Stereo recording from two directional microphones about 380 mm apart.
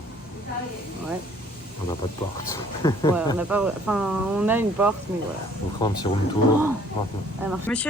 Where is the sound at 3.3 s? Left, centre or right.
Centre.